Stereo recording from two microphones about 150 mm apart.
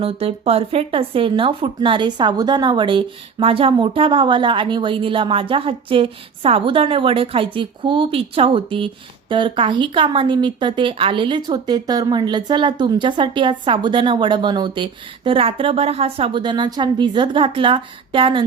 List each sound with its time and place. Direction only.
0.0 s speech: 40° right (ahead or behind)